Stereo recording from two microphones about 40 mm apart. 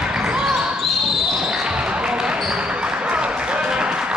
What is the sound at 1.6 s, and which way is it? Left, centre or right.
Basketball bounce, centre.